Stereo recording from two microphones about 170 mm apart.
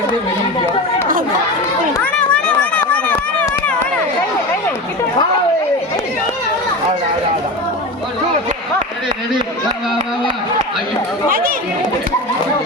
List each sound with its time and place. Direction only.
2.0 s run: 5° left (ahead or behind)
11.3 s speech: 60° right (ahead or behind)